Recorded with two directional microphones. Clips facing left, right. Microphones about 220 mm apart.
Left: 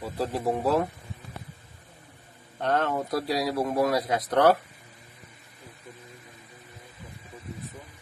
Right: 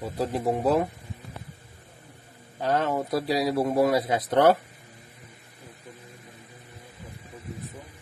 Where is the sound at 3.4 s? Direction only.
25° right (ahead or behind).